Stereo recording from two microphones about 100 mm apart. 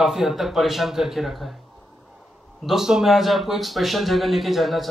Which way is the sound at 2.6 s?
5° right (ahead or behind).